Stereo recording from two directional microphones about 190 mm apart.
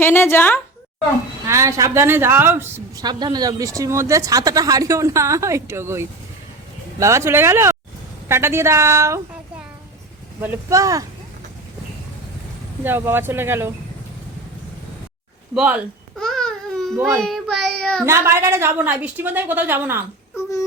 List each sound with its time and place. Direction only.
0.0 s a woman's voice: 10° left (ahead or behind)
1.5 s a woman's voice: 15° right (ahead or behind)
12.8 s a woman's voice: 10° right (ahead or behind)
15.5 s babbling: 5° right (ahead or behind)
17.2 s child singing: centre (ahead or behind)
18.0 s a woman's voice: 15° right (ahead or behind)